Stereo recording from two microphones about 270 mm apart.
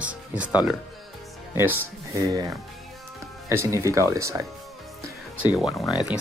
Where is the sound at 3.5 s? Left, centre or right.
Centre.